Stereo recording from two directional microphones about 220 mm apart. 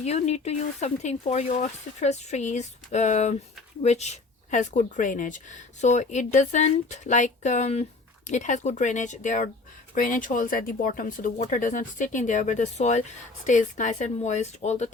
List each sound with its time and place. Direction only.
0.0 s speech: 30° left (ahead or behind)